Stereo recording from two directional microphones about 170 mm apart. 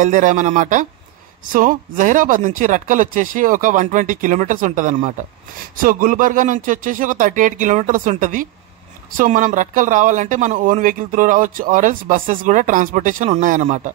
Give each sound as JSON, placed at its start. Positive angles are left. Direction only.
{"t": 0.0, "sound": "speech", "side_deg": -45}